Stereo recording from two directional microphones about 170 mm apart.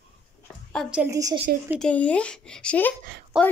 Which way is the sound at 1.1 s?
20° right (ahead or behind).